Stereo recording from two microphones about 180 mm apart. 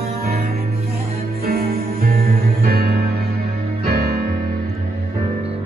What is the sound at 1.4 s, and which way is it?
Music, 55° right (ahead or behind).